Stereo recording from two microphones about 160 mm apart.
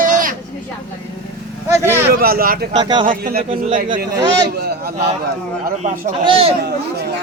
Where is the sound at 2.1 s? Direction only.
65° right (ahead or behind).